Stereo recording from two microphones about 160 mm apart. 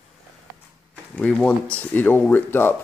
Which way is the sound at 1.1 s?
10° left (ahead or behind).